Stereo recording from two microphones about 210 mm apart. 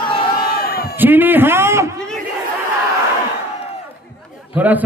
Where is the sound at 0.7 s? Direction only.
45° left (ahead or behind).